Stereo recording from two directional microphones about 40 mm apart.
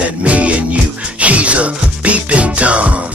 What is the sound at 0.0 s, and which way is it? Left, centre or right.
Music, right.